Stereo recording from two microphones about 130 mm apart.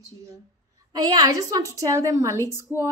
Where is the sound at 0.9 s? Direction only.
30° right (ahead or behind).